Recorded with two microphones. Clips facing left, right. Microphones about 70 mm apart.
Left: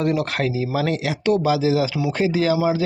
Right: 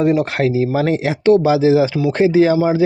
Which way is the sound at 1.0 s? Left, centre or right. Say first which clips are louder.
Right 8 dB; right.